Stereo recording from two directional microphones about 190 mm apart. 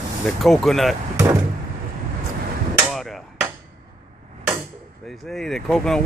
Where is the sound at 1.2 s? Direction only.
15° right (ahead or behind).